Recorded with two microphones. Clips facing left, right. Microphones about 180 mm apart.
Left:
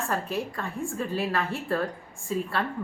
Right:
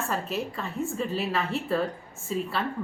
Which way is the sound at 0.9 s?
20° right (ahead or behind).